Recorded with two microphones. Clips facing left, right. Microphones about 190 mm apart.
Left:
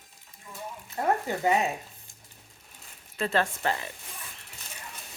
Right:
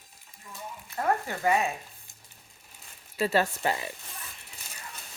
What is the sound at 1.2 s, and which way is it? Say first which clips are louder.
Speech: left 1 dB; 20° left (ahead or behind).